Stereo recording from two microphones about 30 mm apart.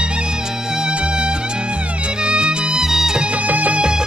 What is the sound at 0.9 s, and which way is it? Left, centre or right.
Music, right.